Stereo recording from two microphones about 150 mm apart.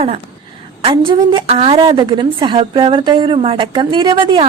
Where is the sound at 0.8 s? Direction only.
35° right (ahead or behind).